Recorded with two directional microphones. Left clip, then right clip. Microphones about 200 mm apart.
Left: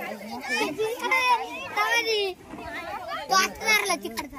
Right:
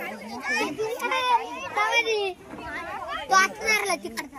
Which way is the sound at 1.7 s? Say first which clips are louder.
Right 1 dB; 55° left (ahead or behind).